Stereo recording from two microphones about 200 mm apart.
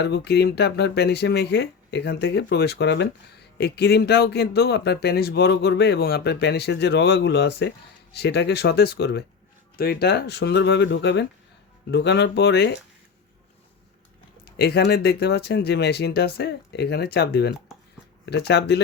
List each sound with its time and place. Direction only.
0.0 s speech: 55° left (ahead or behind)
14.4 s speech: 50° left (ahead or behind)